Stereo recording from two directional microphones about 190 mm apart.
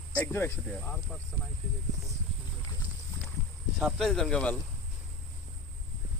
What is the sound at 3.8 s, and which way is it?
Speech, centre (ahead or behind).